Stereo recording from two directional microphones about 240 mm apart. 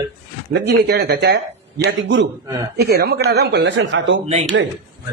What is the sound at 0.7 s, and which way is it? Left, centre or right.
Speech, right.